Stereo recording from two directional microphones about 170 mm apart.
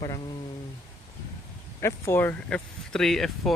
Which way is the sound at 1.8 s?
15° left (ahead or behind).